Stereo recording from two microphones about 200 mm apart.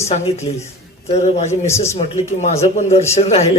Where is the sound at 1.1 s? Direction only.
35° left (ahead or behind).